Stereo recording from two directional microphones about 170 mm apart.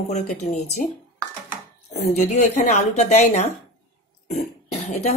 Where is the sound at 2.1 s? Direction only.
40° left (ahead or behind).